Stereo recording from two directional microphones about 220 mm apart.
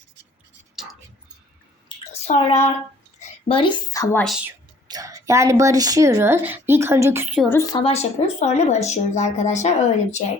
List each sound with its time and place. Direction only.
2.2 s child singing: 30° left (ahead or behind)
3.2 s a woman's voice: 25° left (ahead or behind)
4.4 s a woman's voice: 15° right (ahead or behind)
7.4 s speech: 10° left (ahead or behind); by 10.2 s 30° left (ahead or behind)